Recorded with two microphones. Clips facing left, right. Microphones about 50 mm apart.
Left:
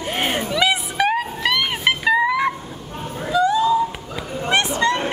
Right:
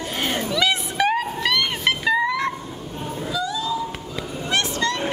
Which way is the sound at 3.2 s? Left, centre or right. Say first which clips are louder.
Left 10 dB; left.